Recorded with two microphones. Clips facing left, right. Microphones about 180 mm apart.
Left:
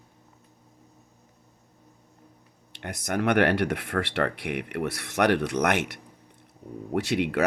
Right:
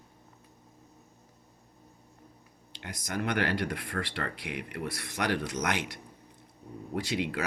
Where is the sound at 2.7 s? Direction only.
65° left (ahead or behind).